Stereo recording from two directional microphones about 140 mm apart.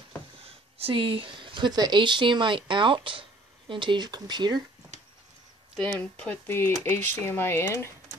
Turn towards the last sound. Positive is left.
turn(degrees=20)  # may be behind; listen again after turning